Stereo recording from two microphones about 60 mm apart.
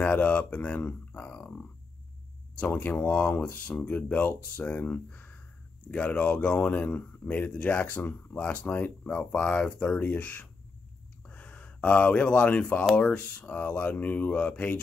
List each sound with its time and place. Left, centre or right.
0.0 s speech: left
0.8 s speech: left
1.3 s grunt: left
2.6 s speech: left
3.1 s speech: centre